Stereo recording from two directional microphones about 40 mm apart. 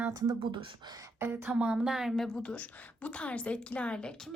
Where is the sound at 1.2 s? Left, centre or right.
Right.